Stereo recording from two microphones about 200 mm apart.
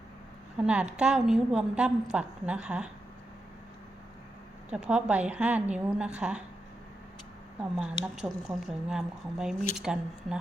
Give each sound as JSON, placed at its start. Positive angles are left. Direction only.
{"t": 0.6, "sound": "a woman's voice", "side_deg": -5}
{"t": 4.7, "sound": "a woman's voice", "side_deg": -5}
{"t": 7.6, "sound": "a woman's voice", "side_deg": -5}